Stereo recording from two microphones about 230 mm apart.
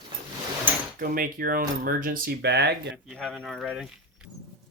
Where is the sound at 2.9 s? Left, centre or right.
Centre.